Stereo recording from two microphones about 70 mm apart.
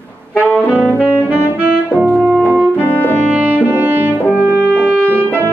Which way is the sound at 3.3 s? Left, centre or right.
Right.